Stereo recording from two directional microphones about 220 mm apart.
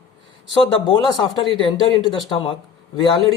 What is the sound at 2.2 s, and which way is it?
Speech, 20° left (ahead or behind).